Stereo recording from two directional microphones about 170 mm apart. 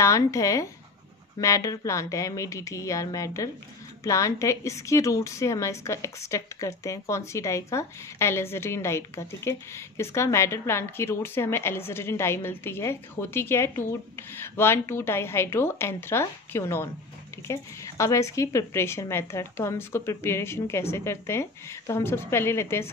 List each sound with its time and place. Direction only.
0.0 s a woman's voice: 20° left (ahead or behind)